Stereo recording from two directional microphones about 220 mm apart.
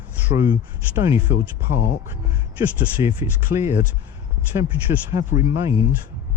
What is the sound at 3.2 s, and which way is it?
Speech, 10° right (ahead or behind).